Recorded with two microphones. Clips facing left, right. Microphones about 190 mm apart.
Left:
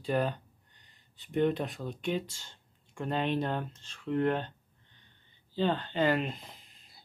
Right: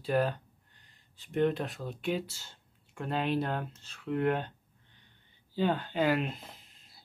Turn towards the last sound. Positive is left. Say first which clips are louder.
# right 1 dB
turn(degrees=0)  # may be behind; listen again after turning